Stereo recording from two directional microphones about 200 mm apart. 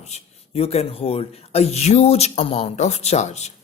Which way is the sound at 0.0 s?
30° left (ahead or behind).